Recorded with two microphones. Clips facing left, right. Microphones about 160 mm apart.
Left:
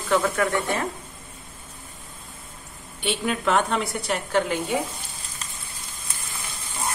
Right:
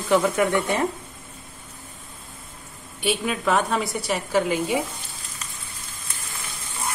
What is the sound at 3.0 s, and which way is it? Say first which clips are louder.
A woman's voice: right 1 dB; 5° right (ahead or behind).